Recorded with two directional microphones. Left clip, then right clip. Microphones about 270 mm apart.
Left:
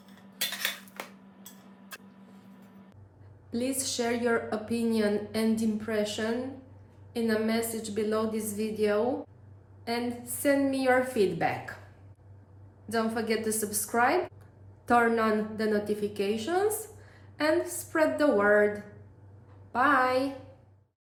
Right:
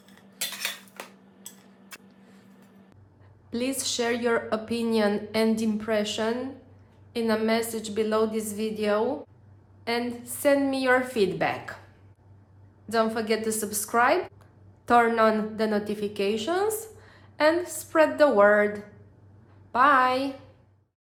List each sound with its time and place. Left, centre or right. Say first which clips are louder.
0.0 s cutlery: left 1 dB; centre
3.5 s a woman's voice: right 3 dB; centre
12.9 s a woman's voice: right 4 dB; centre